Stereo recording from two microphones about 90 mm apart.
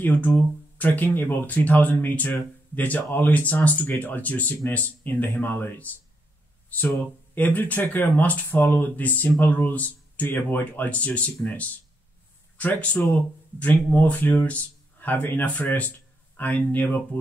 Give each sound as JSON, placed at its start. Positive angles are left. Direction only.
{"t": 0.0, "sound": "speech", "side_deg": 20}
{"t": 7.3, "sound": "speech", "side_deg": 20}
{"t": 12.5, "sound": "speech", "side_deg": 20}